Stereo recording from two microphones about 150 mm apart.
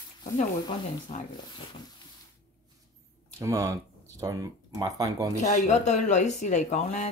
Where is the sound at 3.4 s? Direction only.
20° right (ahead or behind).